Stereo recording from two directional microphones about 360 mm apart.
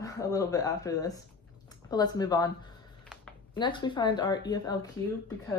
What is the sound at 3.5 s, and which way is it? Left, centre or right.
Speech, centre.